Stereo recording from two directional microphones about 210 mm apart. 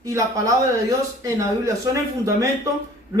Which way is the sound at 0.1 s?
15° right (ahead or behind).